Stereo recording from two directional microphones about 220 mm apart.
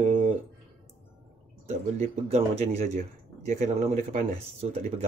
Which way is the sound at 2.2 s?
30° right (ahead or behind).